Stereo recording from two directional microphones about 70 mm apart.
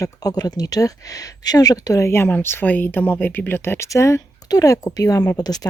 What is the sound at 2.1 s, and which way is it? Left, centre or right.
Speech, left.